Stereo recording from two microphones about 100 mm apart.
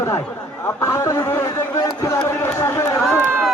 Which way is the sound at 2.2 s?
25° left (ahead or behind).